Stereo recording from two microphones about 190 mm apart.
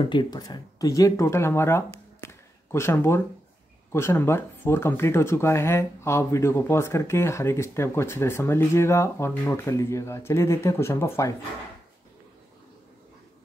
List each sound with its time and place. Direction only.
0.0 s speech: 25° left (ahead or behind)
2.2 s a sound: 15° left (ahead or behind)
3.9 s speech: 15° left (ahead or behind)